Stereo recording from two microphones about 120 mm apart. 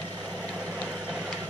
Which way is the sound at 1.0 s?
10° right (ahead or behind).